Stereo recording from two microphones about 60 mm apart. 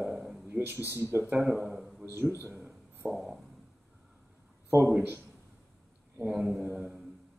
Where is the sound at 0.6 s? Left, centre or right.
Right.